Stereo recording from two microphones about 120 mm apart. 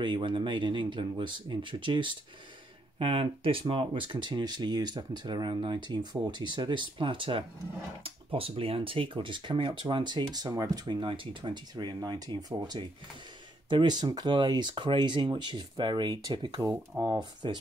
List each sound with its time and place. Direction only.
0.0 s speech: 45° right (ahead or behind)